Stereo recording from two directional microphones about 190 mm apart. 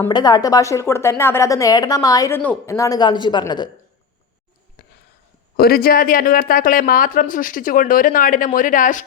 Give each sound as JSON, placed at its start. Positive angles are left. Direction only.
{"t": 0.1, "sound": "a woman's voice", "side_deg": 20}
{"t": 4.8, "sound": "a sound", "side_deg": 55}
{"t": 5.5, "sound": "speech", "side_deg": 55}